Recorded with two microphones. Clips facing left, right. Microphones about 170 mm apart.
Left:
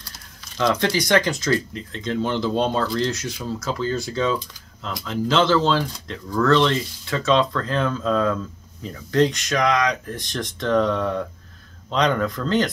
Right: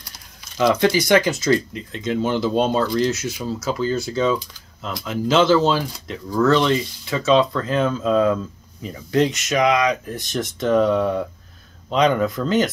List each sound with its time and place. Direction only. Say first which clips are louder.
0.6 s speech: right 4 dB; 10° right (ahead or behind)
1.5 s speech: right 5 dB; 15° right (ahead or behind)
3.1 s speech: right 3 dB; 5° right (ahead or behind)